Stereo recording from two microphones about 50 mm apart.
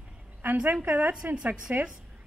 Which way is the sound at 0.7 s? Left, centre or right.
Right.